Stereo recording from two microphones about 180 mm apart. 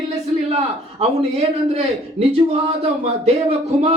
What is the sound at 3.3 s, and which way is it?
Speech, 35° right (ahead or behind).